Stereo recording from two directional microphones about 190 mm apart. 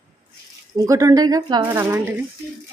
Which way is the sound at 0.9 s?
15° right (ahead or behind).